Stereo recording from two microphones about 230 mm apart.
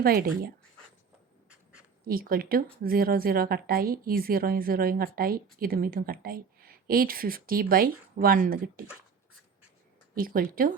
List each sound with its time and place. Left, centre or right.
0.0 s speech: right
2.0 s speech: right
10.2 s speech: right